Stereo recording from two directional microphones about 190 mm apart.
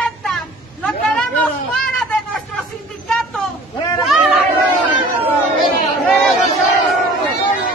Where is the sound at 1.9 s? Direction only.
5° left (ahead or behind).